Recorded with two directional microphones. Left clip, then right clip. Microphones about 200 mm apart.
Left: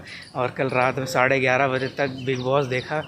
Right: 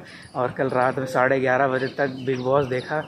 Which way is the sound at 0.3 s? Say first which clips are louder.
Right 1 dB; 10° left (ahead or behind).